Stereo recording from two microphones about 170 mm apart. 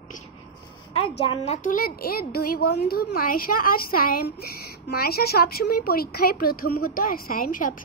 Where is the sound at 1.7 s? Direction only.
60° left (ahead or behind).